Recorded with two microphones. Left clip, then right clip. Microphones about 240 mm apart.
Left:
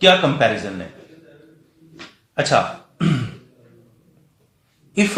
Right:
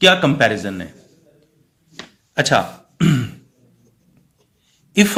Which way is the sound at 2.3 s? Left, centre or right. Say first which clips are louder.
Right 3 dB; right.